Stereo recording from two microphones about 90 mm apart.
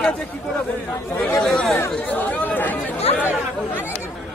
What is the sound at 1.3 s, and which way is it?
Chatter, 5° left (ahead or behind).